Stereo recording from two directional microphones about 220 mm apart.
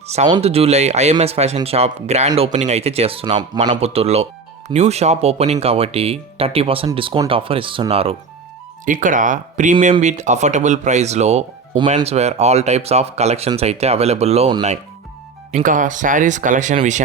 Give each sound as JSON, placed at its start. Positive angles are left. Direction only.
{"t": 0.1, "sound": "speech", "side_deg": -25}
{"t": 8.9, "sound": "speech", "side_deg": -35}